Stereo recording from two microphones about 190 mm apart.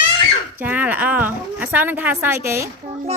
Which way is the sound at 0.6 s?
10° right (ahead or behind).